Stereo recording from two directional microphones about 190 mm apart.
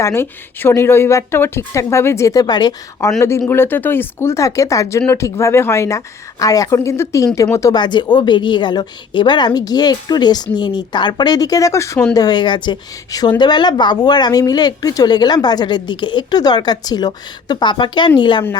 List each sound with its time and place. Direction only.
0.0 s a woman's voice: 10° left (ahead or behind)